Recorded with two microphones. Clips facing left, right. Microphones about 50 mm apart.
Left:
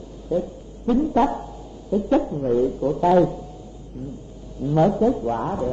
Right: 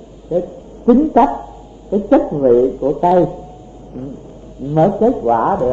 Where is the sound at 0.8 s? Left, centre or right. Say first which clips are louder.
Right 9 dB; right.